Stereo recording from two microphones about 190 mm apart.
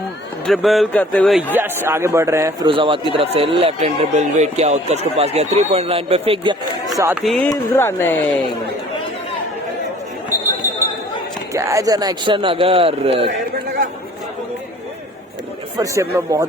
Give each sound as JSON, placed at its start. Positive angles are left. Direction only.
{"t": 0.4, "sound": "speech", "side_deg": 0}
{"t": 1.5, "sound": "a man's voice", "side_deg": -10}
{"t": 2.6, "sound": "speech", "side_deg": -25}
{"t": 6.9, "sound": "a man's voice", "side_deg": -15}
{"t": 7.2, "sound": "speech", "side_deg": 5}
{"t": 7.5, "sound": "speech", "side_deg": 15}
{"t": 11.5, "sound": "a man's voice", "side_deg": -15}
{"t": 15.8, "sound": "a man's voice", "side_deg": -15}